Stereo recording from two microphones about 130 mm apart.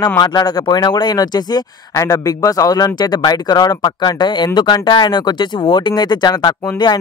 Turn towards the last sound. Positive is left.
turn(degrees=35)  # may be behind; listen again after turning